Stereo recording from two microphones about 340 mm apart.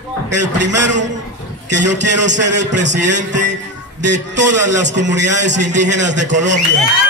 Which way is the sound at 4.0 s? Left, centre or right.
Right.